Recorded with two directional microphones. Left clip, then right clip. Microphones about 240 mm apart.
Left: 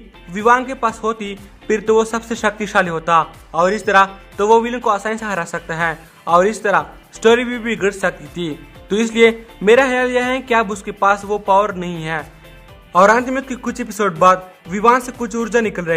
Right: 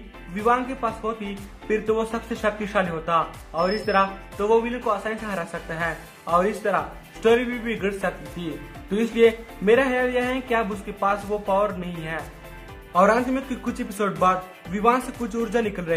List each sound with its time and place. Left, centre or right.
0.3 s a man's voice: left